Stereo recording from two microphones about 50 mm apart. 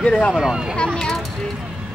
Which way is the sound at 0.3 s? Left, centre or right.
Centre.